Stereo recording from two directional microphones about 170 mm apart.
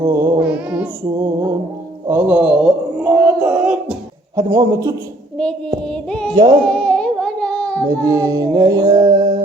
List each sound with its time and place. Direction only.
0.0 s music: 15° right (ahead or behind)
1.2 s a sound: 20° right (ahead or behind)
4.4 s music: 20° right (ahead or behind)
5.8 s music: 5° left (ahead or behind)
6.3 s music: 25° right (ahead or behind)
6.7 s music: 5° left (ahead or behind)
8.0 s music: 20° right (ahead or behind)